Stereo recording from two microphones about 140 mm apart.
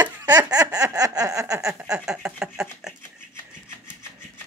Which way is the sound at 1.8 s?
5° right (ahead or behind).